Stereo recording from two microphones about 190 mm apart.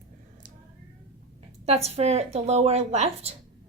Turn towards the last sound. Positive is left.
turn(degrees=-35)  # may be behind; listen again after turning